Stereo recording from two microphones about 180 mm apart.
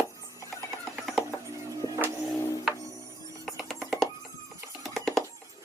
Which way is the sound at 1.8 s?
20° left (ahead or behind).